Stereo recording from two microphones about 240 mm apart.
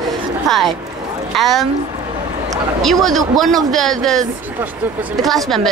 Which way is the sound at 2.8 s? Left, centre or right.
Centre.